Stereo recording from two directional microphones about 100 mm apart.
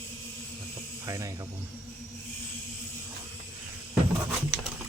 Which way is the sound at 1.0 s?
35° right (ahead or behind).